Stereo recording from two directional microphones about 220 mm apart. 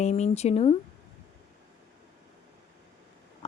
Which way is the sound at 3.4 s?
30° left (ahead or behind).